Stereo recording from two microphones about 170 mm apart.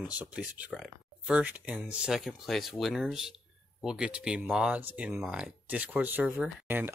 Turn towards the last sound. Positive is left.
turn(degrees=-15)  # may be behind; listen again after turning